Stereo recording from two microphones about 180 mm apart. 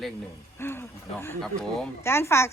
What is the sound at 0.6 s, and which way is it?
Speech, 10° left (ahead or behind).